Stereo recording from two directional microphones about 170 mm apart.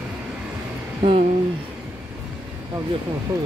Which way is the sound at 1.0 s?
40° right (ahead or behind).